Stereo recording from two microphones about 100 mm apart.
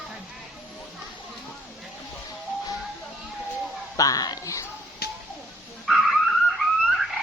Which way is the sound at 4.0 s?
40° left (ahead or behind).